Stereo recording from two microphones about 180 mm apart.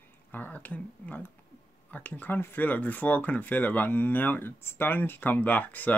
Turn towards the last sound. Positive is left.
turn(degrees=10)  # may be behind; listen again after turning